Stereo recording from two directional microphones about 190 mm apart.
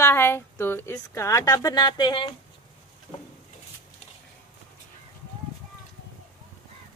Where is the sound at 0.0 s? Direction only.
10° left (ahead or behind).